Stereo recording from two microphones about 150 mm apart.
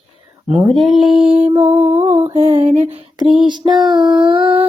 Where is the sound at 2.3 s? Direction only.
40° right (ahead or behind).